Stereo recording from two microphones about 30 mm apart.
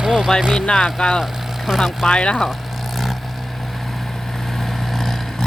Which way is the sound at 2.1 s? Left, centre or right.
Left.